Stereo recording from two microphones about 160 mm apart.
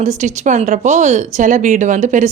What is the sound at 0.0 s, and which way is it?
Speech, 50° right (ahead or behind).